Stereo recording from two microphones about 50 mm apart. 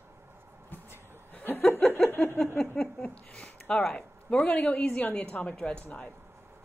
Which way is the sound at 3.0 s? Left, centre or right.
Left.